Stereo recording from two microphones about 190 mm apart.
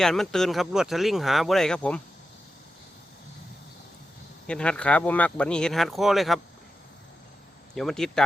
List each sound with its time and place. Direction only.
0.0 s speech: centre (ahead or behind)
4.4 s speech: 5° left (ahead or behind)
7.8 s speech: 5° left (ahead or behind)